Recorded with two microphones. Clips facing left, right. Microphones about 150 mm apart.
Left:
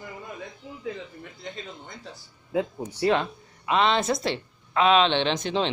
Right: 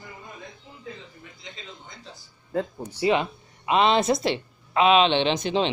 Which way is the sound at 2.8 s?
10° right (ahead or behind).